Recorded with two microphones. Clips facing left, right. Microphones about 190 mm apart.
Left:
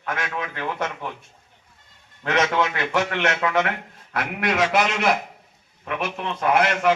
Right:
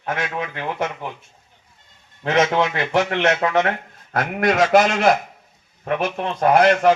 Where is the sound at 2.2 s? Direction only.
25° right (ahead or behind).